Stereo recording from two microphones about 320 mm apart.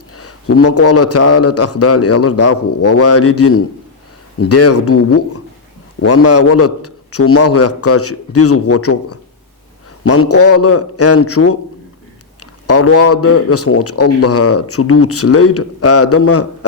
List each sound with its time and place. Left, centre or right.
0.2 s a man's voice: left
12.6 s a man's voice: left